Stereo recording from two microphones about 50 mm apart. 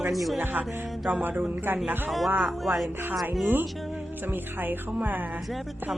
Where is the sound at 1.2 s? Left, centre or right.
Right.